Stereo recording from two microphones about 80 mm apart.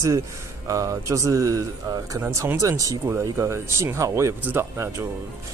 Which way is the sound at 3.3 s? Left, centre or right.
Right.